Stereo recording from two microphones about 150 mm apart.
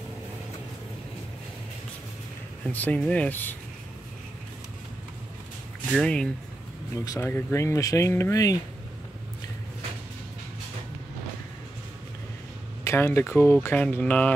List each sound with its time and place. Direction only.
2.7 s speech: 10° left (ahead or behind)
5.9 s speech: 5° left (ahead or behind); by 8.5 s 20° left (ahead or behind)
12.8 s speech: 15° left (ahead or behind)